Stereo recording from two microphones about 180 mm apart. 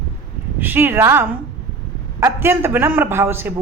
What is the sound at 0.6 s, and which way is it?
Speech, 10° right (ahead or behind).